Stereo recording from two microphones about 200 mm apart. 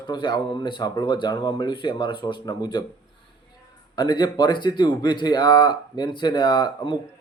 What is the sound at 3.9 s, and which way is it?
Speech, 20° left (ahead or behind).